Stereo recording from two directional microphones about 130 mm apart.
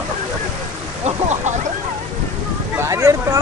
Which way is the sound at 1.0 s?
60° right (ahead or behind).